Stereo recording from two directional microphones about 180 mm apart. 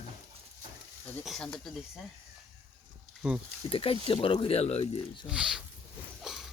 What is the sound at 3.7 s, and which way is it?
Speech, 30° left (ahead or behind).